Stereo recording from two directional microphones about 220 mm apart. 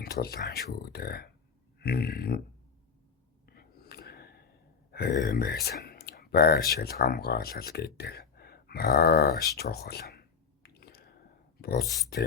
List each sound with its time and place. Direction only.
0.0 s speech: 45° left (ahead or behind)
3.4 s a sound: 45° left (ahead or behind)
4.9 s speech: 45° left (ahead or behind)